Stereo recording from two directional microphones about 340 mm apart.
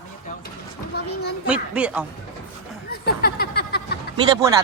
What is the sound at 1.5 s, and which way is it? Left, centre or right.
Speech, centre.